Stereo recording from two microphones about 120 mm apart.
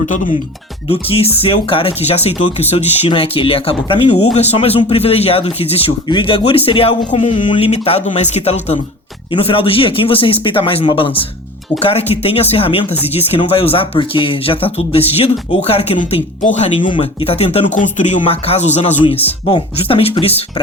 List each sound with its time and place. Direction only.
0.0 s speech: 90° left
0.9 s speech: 55° left (ahead or behind)
4.4 s speech: 60° left (ahead or behind)
7.7 s speech: 60° left (ahead or behind)
9.3 s speech: 50° left (ahead or behind); by 16.6 s 85° left
16.8 s speech: 45° left (ahead or behind)
17.7 s speech: 90° left; by 18.9 s 75° left (ahead or behind)
19.5 s speech: 50° left (ahead or behind)